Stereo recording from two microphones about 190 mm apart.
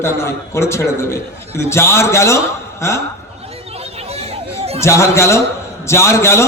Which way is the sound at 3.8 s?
30° right (ahead or behind).